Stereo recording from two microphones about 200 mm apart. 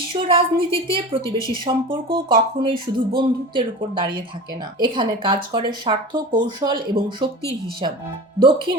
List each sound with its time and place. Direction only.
0.1 s speech: 25° right (ahead or behind)
8.4 s speech: 25° right (ahead or behind)